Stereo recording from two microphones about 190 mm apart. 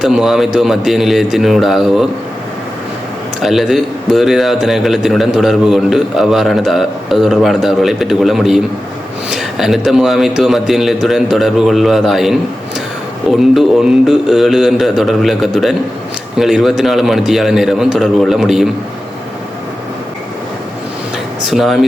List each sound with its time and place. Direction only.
0.0 s a man's voice: centre (ahead or behind)
3.4 s a man's voice: centre (ahead or behind)
21.4 s a man's voice: centre (ahead or behind)